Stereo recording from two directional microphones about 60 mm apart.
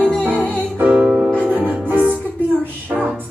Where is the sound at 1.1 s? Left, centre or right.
Right.